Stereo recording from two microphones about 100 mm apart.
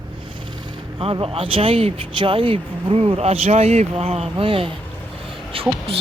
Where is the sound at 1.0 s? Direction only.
70° right (ahead or behind).